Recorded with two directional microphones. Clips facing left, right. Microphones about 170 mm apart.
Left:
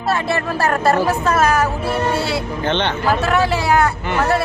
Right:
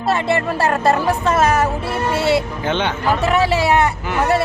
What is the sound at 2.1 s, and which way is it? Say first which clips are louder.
Speech: right 4 dB; centre (ahead or behind).